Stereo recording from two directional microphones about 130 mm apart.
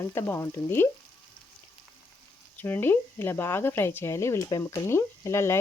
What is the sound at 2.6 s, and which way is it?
Speech, 15° left (ahead or behind).